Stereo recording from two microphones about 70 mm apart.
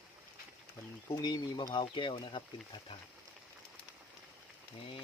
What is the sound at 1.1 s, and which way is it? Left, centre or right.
Speech, left.